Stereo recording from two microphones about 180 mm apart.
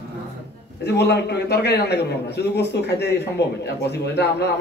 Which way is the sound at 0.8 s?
70° left (ahead or behind).